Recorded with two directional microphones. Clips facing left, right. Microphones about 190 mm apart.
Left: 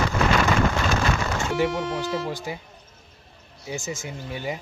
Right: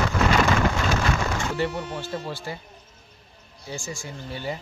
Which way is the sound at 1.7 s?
90° left.